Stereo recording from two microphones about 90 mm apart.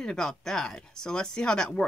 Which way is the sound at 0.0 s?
5° left (ahead or behind).